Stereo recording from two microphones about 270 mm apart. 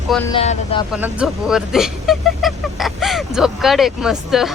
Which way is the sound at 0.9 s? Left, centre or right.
Centre.